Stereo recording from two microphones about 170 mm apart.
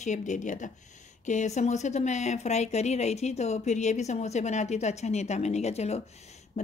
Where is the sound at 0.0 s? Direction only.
45° left (ahead or behind).